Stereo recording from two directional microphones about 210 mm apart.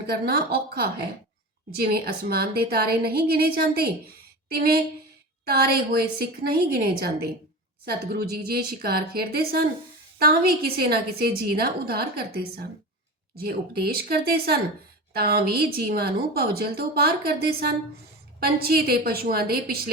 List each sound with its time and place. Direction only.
0.1 s a woman's voice: 45° right (ahead or behind)